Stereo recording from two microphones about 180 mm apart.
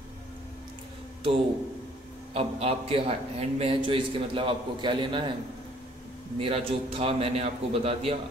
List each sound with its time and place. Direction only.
2.3 s a man's voice: 35° right (ahead or behind)
6.3 s a man's voice: 30° right (ahead or behind)